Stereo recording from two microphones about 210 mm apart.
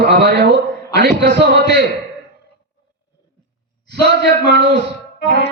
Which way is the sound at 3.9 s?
55° right (ahead or behind).